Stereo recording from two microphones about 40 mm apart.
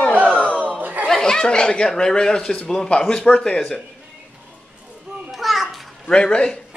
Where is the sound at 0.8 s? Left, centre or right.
Right.